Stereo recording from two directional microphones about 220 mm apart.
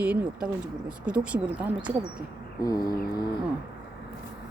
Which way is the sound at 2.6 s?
15° left (ahead or behind).